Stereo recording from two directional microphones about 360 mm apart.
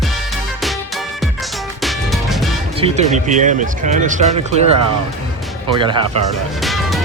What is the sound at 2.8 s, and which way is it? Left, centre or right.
Speech, centre.